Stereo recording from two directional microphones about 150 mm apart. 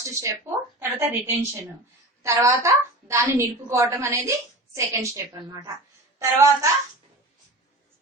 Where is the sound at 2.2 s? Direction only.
20° right (ahead or behind).